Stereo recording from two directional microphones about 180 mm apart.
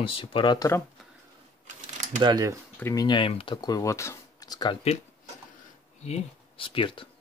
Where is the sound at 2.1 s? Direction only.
20° right (ahead or behind).